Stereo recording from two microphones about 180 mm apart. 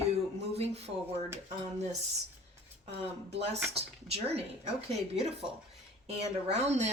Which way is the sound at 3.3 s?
35° right (ahead or behind).